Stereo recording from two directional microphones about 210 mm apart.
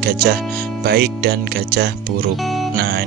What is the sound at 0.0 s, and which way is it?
Speech, 50° right (ahead or behind).